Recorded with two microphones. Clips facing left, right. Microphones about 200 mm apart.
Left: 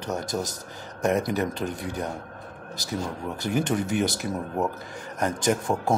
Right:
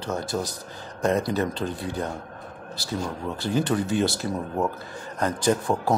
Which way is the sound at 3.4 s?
20° left (ahead or behind).